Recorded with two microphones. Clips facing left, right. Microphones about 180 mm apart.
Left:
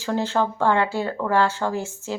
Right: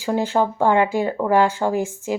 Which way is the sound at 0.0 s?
15° right (ahead or behind).